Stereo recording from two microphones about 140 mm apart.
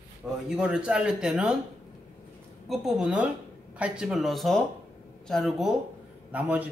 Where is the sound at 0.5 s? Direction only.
5° right (ahead or behind).